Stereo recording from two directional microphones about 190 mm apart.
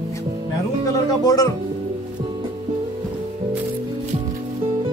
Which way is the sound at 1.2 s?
20° left (ahead or behind).